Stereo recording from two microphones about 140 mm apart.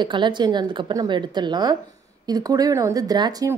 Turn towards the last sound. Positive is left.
turn(degrees=-30)  # may be behind; listen again after turning